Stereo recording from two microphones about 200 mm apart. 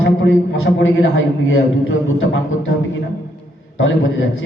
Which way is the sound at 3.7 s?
70° left (ahead or behind).